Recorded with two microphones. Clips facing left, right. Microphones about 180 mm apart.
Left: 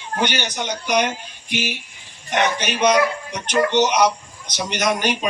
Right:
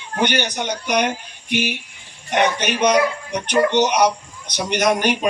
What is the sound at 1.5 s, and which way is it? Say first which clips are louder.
Speech: right 4 dB; 55° right (ahead or behind).